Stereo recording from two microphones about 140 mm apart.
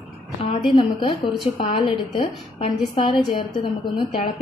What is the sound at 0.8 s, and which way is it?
Speech, 35° left (ahead or behind).